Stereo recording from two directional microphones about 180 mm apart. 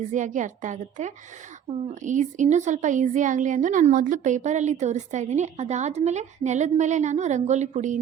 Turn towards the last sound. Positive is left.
turn(degrees=-40)  # may be behind; listen again after turning